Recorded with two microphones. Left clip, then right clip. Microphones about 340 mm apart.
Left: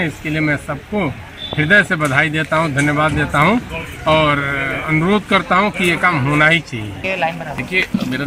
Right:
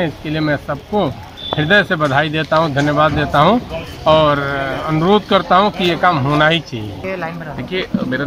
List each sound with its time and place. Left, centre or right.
0.0 s speech: centre
7.1 s speech: left
7.7 s speech: centre